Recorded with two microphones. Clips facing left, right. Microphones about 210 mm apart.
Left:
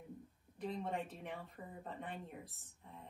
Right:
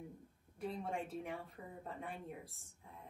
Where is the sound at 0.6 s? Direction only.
Centre (ahead or behind).